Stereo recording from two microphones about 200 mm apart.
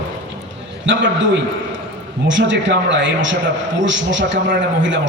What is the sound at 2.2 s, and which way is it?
A man's voice, 65° right (ahead or behind).